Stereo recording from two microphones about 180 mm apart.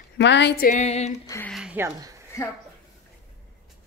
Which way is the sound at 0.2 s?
75° left (ahead or behind).